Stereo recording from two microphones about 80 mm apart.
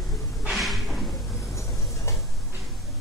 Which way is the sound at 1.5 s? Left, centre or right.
Left.